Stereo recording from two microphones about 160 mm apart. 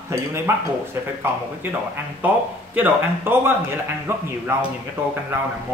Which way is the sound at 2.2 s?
10° right (ahead or behind).